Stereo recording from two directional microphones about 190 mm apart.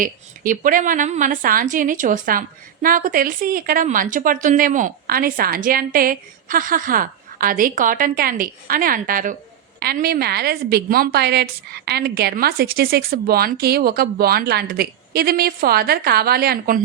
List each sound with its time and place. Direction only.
0.0 s a woman's voice: 45° right (ahead or behind)